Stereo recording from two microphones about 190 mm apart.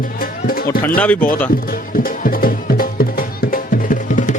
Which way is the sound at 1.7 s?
50° left (ahead or behind).